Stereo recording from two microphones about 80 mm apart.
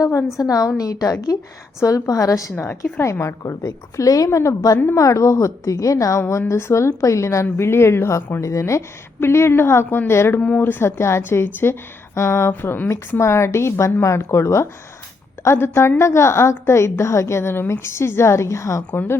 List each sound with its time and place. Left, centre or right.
0.0 s a woman's voice: left
2.6 s a woman's voice: left
10.4 s a woman's voice: centre; by 18.8 s left